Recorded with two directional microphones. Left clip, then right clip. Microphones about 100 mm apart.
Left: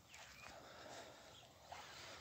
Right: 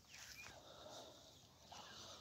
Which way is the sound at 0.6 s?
15° right (ahead or behind).